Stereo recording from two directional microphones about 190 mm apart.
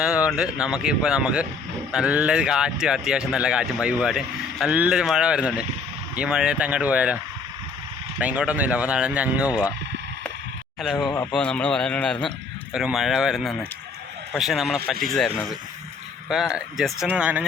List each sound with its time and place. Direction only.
0.0 s speech: 5° right (ahead or behind)
8.2 s speech: 5° right (ahead or behind)
10.9 s speech: 20° left (ahead or behind)
11.3 s speech: 5° left (ahead or behind)